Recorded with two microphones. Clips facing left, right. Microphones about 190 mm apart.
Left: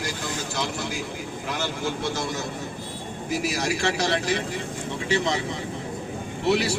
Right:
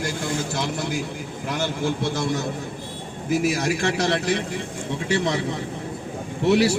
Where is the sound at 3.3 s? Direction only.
50° right (ahead or behind).